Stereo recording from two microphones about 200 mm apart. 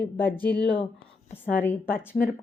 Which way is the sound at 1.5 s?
10° left (ahead or behind).